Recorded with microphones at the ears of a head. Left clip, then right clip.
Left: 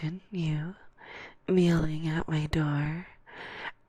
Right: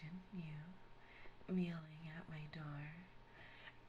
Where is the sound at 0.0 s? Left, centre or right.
Left.